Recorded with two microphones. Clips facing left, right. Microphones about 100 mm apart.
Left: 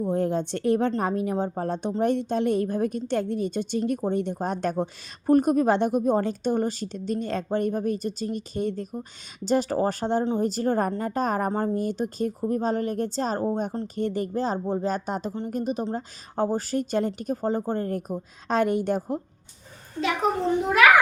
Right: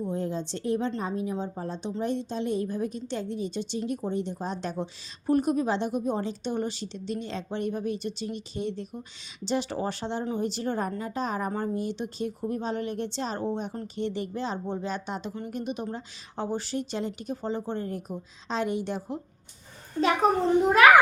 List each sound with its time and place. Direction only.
0.1 s a woman's voice: 60° left (ahead or behind)